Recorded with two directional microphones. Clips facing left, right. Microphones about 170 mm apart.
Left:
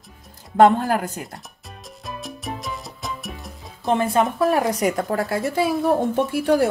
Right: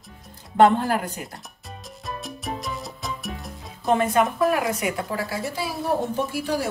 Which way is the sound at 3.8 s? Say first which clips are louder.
Left 1 dB; 30° left (ahead or behind).